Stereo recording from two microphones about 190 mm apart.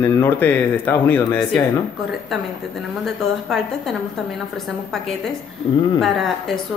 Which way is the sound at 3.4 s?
Centre (ahead or behind).